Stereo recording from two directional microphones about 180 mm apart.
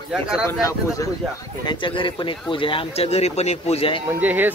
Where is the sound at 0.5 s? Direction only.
20° left (ahead or behind).